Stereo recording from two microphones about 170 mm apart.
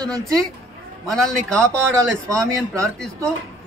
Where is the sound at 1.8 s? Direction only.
15° right (ahead or behind).